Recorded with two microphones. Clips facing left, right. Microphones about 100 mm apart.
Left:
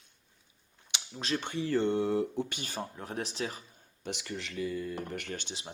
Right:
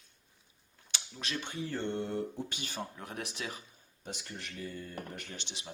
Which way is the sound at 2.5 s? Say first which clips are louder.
Left 3 dB; 45° left (ahead or behind).